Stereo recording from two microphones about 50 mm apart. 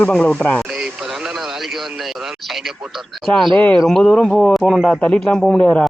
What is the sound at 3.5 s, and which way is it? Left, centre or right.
Speech, left.